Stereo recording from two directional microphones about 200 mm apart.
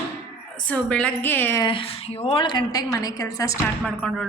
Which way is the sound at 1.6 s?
25° left (ahead or behind).